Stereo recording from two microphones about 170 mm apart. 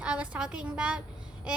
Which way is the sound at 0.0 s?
5° right (ahead or behind).